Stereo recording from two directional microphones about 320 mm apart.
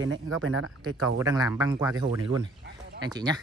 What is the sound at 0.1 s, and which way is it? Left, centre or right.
Speech, right.